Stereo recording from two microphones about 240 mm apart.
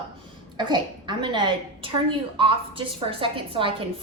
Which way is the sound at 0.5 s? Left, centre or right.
Centre.